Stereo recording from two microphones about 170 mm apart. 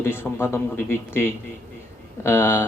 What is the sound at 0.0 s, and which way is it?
Speech, 15° left (ahead or behind).